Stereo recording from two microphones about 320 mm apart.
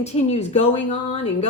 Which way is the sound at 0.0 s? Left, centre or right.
Left.